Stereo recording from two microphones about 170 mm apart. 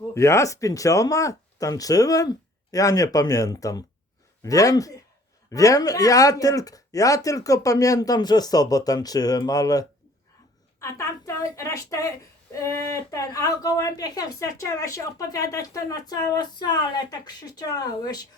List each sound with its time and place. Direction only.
0.1 s a woman's voice: 15° left (ahead or behind)